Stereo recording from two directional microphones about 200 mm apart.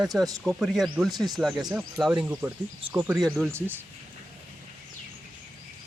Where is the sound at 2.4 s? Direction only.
10° right (ahead or behind).